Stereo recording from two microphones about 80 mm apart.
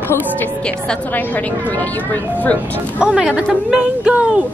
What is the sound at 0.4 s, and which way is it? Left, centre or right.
A woman's voice, centre.